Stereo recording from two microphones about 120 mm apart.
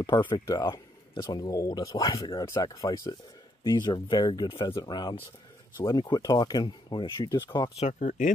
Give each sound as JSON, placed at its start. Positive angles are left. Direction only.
{"t": 0.0, "sound": "speech", "side_deg": 40}
{"t": 7.8, "sound": "speech", "side_deg": 90}